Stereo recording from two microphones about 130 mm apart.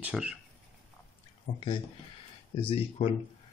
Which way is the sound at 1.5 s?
40° left (ahead or behind).